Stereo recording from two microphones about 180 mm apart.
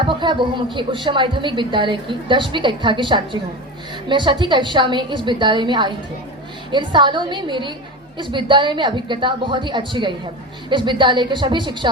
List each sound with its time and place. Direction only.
0.0 s a woman's voice: 25° right (ahead or behind)